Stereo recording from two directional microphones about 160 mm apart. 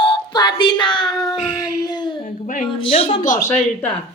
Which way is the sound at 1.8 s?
25° left (ahead or behind).